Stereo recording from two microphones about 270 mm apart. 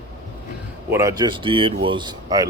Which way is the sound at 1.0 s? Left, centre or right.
Centre.